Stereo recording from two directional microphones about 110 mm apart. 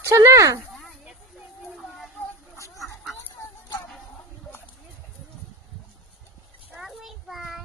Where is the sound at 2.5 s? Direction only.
30° left (ahead or behind).